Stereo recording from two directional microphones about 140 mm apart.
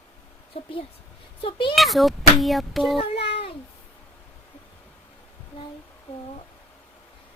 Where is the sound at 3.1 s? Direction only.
40° left (ahead or behind).